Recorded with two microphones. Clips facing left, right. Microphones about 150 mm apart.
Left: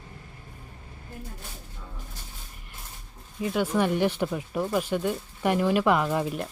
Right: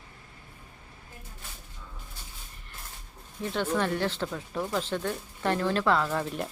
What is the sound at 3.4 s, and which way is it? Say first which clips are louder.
Speech: left 3 dB; 10° left (ahead or behind).